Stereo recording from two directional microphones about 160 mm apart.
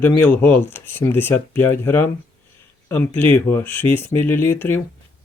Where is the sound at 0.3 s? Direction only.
10° left (ahead or behind).